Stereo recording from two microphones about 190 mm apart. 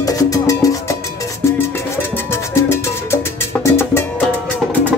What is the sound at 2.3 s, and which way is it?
Music, 15° left (ahead or behind).